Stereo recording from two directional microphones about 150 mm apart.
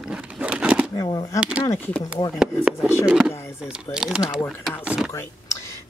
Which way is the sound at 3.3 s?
20° left (ahead or behind).